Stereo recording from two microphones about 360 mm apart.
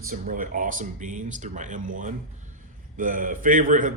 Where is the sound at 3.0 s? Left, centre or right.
Right.